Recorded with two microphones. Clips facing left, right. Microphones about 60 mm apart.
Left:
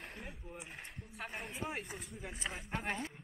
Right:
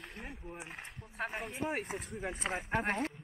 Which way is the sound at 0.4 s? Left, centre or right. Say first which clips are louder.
Right 3 dB; centre.